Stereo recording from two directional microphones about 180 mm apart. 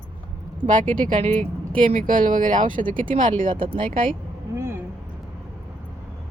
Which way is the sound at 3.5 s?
30° right (ahead or behind).